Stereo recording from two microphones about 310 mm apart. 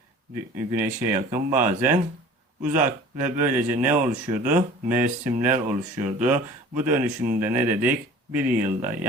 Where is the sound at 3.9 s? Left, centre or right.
Right.